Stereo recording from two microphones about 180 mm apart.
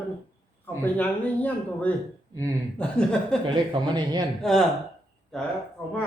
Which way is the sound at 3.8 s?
25° right (ahead or behind).